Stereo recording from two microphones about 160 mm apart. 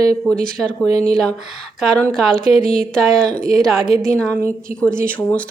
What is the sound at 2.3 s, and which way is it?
Speech, 65° right (ahead or behind).